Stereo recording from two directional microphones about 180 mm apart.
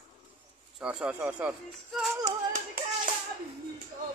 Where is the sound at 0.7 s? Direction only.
5° right (ahead or behind).